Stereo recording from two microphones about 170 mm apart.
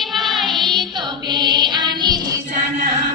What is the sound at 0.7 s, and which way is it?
Music, 25° right (ahead or behind).